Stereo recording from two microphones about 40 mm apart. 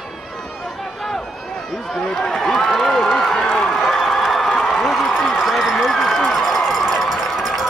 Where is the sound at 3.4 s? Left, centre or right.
Centre.